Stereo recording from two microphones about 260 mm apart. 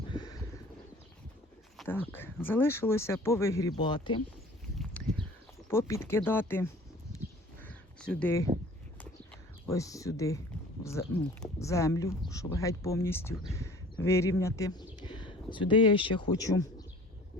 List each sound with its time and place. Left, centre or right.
0.1 s bird: centre
1.7 s speech: centre
5.0 s a sound: centre
5.6 s speech: centre
7.6 s a sound: centre
9.6 s speech: centre